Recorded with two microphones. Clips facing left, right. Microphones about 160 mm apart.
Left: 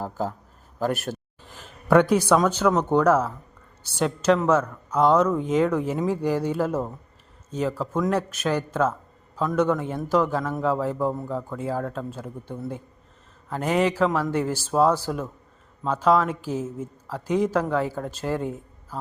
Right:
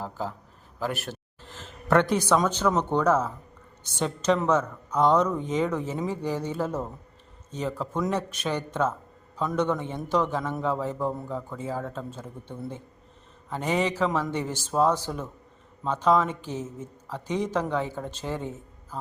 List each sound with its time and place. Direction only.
0.0 s a man's voice: 45° left (ahead or behind)
1.5 s a sound: 10° left (ahead or behind)
2.5 s speech: 5° left (ahead or behind)